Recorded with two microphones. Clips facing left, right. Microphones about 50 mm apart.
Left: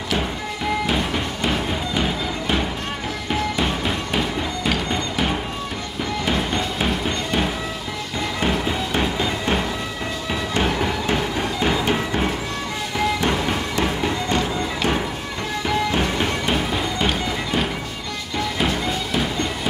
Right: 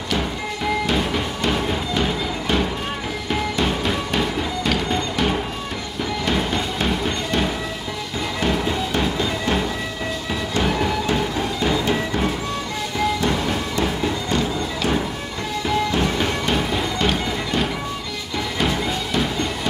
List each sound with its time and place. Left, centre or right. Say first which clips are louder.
0.8 s music: right 1 dB; centre
11.6 s music: even; left
13.7 s music: left 1 dB; left
15.9 s music: even; centre